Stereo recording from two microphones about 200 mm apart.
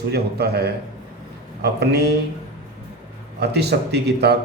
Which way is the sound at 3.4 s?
55° right (ahead or behind).